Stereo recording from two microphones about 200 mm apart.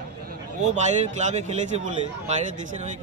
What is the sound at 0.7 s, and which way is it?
Speech, 35° right (ahead or behind).